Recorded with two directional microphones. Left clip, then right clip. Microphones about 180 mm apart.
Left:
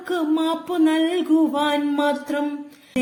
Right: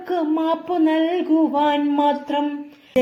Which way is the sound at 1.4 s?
35° left (ahead or behind).